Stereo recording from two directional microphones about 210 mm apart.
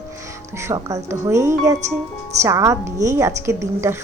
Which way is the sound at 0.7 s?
15° right (ahead or behind).